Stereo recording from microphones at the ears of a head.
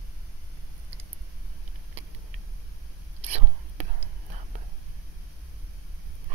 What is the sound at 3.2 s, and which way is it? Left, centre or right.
Whispering, right.